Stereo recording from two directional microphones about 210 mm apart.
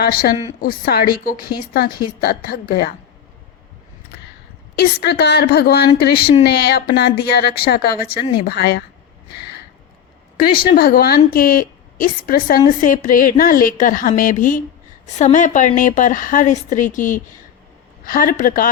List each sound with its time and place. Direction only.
0.0 s a woman's voice: 45° left (ahead or behind)
1.4 s speech: 20° left (ahead or behind)
1.7 s a woman's voice: 45° left (ahead or behind)
4.8 s a woman's voice: 50° left (ahead or behind)
9.3 s a sound: 50° left (ahead or behind)
10.8 s a woman's voice: 45° left (ahead or behind)